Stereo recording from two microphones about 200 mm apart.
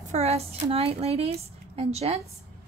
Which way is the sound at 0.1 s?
30° right (ahead or behind).